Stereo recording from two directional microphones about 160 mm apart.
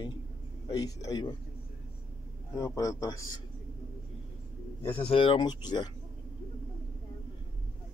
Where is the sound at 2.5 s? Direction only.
20° left (ahead or behind).